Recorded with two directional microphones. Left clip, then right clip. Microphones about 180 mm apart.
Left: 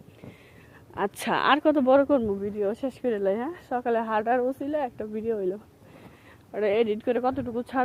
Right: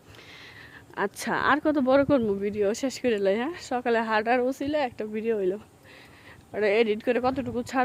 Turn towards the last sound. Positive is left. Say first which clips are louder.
# even
turn(degrees=-15)  # may be behind; listen again after turning